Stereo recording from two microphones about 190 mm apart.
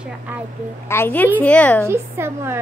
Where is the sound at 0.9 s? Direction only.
10° left (ahead or behind).